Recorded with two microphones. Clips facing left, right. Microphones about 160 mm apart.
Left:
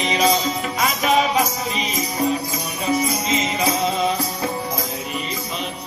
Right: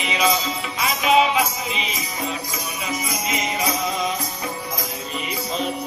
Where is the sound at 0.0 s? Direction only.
40° left (ahead or behind).